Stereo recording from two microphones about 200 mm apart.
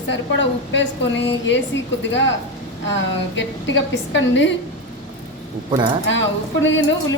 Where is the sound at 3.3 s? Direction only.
65° left (ahead or behind).